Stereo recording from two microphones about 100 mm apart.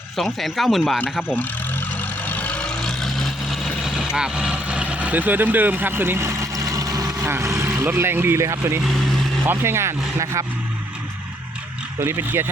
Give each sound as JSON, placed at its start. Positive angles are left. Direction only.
{"t": 0.2, "sound": "speech", "side_deg": 0}
{"t": 1.4, "sound": "vehicle", "side_deg": 15}
{"t": 3.8, "sound": "speech", "side_deg": -5}
{"t": 11.9, "sound": "speech", "side_deg": -25}